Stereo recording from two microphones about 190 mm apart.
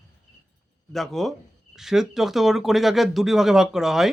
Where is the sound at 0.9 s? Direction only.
Centre (ahead or behind).